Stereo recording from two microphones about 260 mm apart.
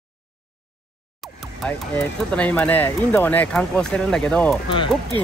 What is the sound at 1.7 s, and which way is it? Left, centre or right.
Speech, centre.